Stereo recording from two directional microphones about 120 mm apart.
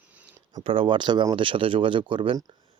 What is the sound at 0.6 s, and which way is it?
Speech, 45° right (ahead or behind).